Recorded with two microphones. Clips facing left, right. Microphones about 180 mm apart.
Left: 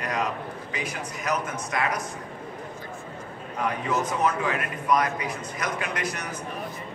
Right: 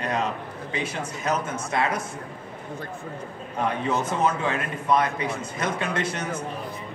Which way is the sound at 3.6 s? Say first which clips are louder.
Right 2 dB; 30° right (ahead or behind).